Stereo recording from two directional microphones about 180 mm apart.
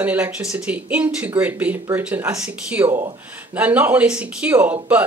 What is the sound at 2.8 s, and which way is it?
Speech, 30° right (ahead or behind).